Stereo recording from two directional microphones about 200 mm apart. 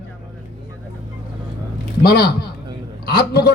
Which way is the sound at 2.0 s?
50° left (ahead or behind).